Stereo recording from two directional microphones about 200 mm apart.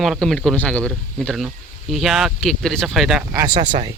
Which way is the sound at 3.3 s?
20° right (ahead or behind).